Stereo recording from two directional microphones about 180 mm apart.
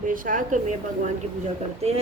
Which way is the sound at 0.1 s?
50° right (ahead or behind).